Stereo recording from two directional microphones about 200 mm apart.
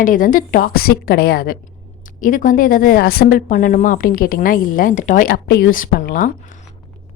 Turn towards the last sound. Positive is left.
turn(degrees=40)  # may be behind; listen again after turning